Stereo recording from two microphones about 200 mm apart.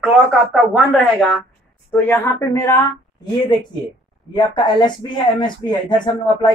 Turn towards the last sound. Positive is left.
turn(degrees=20)  # may be behind; listen again after turning